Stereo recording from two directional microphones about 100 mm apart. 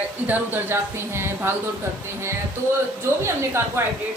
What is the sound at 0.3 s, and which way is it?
Speech, 20° right (ahead or behind).